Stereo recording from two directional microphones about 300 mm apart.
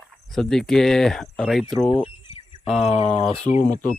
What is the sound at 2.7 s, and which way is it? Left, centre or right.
Speech, centre.